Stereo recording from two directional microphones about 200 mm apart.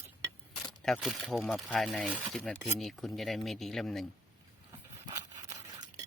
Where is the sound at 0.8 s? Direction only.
Centre (ahead or behind).